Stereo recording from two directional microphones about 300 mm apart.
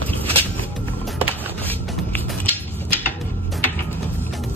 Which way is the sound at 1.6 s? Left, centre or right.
Centre.